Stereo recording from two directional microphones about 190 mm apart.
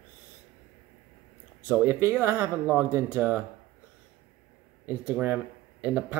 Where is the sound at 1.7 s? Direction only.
10° right (ahead or behind).